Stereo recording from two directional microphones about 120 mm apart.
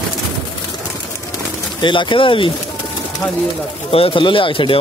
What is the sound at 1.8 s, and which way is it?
Speech, 45° left (ahead or behind).